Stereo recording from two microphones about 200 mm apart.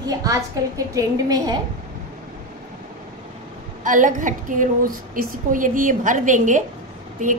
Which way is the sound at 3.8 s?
40° right (ahead or behind).